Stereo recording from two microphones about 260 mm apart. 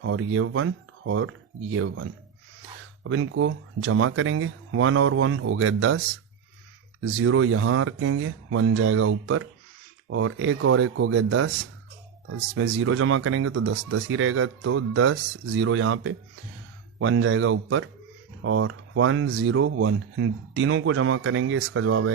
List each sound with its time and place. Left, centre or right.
0.0 s speech: right
7.2 s speech: right
12.5 s speech: right